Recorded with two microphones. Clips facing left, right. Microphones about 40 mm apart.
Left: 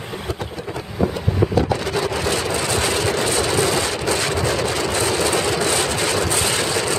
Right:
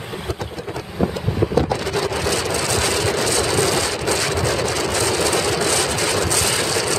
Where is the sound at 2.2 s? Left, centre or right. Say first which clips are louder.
Even; left.